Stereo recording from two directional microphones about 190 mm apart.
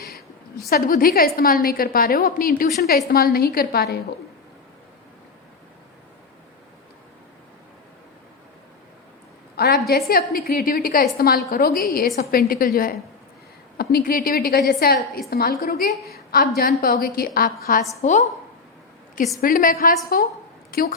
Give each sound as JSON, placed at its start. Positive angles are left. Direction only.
{"t": 0.7, "sound": "a woman's voice", "side_deg": 50}
{"t": 9.6, "sound": "a woman's voice", "side_deg": 55}
{"t": 18.0, "sound": "a woman's voice", "side_deg": 40}
{"t": 19.4, "sound": "a woman's voice", "side_deg": 45}